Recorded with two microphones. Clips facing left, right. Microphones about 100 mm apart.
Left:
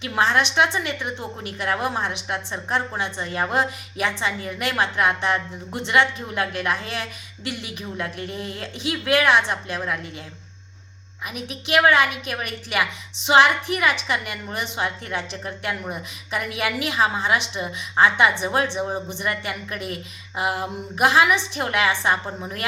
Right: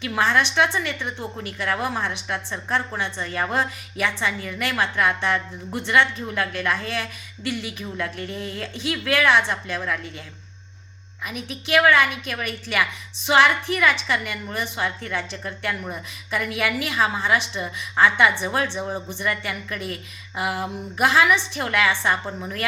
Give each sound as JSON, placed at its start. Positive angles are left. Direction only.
{"t": 0.0, "sound": "a woman's voice", "side_deg": 20}
{"t": 11.3, "sound": "a woman's voice", "side_deg": 20}